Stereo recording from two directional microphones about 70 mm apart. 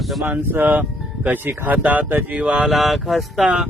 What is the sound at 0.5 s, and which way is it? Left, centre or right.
A man's voice, right.